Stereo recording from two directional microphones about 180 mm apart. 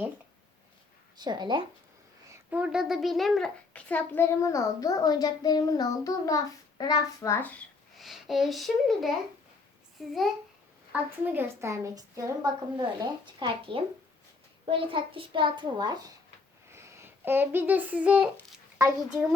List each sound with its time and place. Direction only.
1.2 s a child's voice: 25° right (ahead or behind)
2.5 s a child's voice: 5° right (ahead or behind); by 16.0 s 25° right (ahead or behind)
16.7 s a child's voice: 15° right (ahead or behind)